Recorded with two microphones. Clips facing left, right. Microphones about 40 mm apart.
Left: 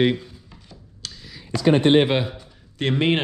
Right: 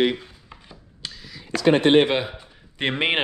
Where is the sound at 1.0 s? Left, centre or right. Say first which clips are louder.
Right 1 dB; right.